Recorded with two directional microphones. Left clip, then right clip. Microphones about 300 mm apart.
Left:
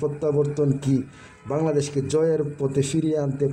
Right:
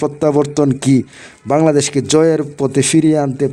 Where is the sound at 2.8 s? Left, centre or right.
Right.